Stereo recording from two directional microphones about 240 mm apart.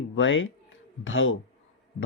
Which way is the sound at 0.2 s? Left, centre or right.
Left.